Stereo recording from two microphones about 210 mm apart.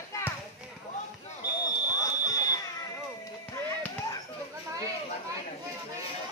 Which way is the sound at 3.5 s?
15° left (ahead or behind).